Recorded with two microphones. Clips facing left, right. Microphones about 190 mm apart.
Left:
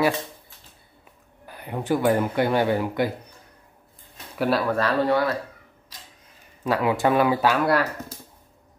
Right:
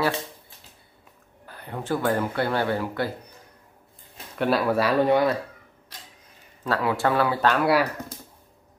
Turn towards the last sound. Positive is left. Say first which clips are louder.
# even
turn(degrees=-5)  # may be behind; listen again after turning